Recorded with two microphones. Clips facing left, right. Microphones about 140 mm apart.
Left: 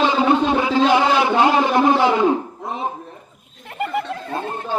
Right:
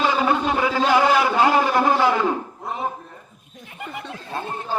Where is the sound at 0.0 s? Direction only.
25° left (ahead or behind).